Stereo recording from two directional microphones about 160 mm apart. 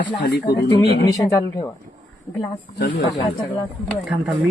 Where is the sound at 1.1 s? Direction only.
25° left (ahead or behind).